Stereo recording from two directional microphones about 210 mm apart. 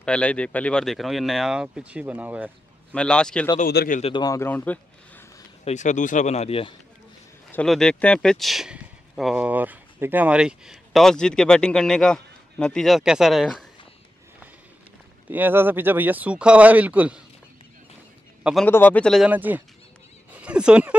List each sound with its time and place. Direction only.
0.0 s speech: 5° left (ahead or behind)
2.9 s speech: 5° left (ahead or behind)
3.6 s speech: 45° left (ahead or behind)
4.0 s speech: 20° left (ahead or behind)
5.7 s speech: 35° left (ahead or behind)
7.5 s speech: centre (ahead or behind)
15.2 s speech: 10° right (ahead or behind)
18.4 s a man's voice: centre (ahead or behind)